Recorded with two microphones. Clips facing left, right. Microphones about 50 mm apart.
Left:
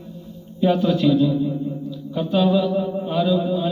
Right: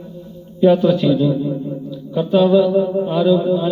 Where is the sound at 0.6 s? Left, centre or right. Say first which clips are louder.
Right 5 dB; centre.